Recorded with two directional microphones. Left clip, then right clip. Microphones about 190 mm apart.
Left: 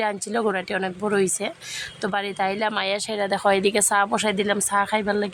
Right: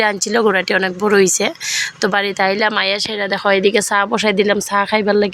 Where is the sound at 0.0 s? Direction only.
20° right (ahead or behind).